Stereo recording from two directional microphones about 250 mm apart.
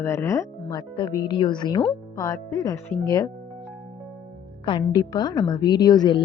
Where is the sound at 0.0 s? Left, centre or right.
Centre.